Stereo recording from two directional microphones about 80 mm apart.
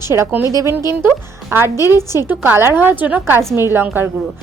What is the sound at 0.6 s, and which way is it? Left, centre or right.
A woman's voice, right.